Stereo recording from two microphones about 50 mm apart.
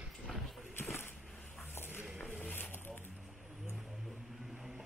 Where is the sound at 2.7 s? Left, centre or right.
Left.